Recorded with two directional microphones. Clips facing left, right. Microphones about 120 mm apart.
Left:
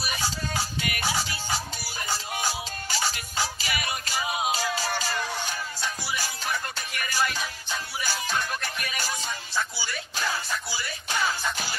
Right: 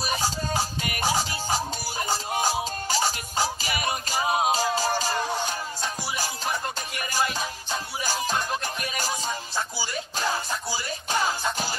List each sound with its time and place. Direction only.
0.0 s music: 35° right (ahead or behind)